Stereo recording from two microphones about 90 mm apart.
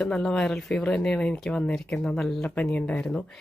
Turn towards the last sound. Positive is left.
turn(degrees=10)  # may be behind; listen again after turning